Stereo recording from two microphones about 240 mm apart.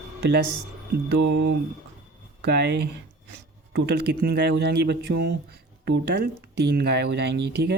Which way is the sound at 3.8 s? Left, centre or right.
Right.